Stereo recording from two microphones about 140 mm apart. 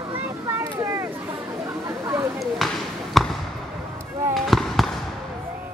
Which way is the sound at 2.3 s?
Centre (ahead or behind).